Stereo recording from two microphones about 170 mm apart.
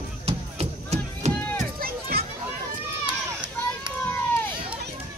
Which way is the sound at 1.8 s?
60° right (ahead or behind).